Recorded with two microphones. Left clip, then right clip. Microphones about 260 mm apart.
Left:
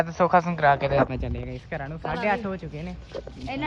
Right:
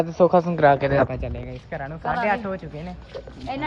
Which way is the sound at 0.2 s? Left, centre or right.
Left.